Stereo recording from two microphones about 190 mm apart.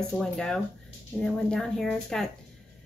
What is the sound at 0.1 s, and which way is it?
A woman's voice, 5° left (ahead or behind).